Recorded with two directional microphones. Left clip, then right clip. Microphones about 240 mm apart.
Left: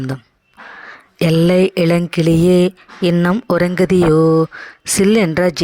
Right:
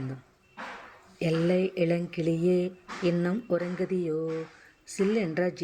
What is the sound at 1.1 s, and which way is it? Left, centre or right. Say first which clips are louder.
Speech: left 13 dB; left.